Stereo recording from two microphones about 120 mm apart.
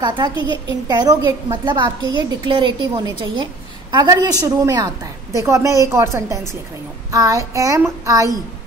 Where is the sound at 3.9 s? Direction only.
35° right (ahead or behind).